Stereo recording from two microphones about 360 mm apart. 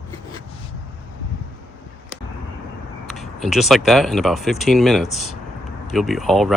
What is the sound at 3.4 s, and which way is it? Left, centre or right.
Speech, centre.